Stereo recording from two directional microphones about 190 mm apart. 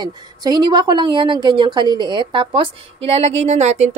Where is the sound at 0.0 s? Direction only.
20° right (ahead or behind).